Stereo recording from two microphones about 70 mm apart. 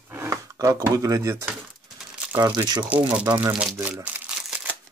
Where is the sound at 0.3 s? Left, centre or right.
Right.